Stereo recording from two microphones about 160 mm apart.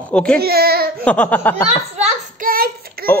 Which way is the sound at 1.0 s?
10° left (ahead or behind).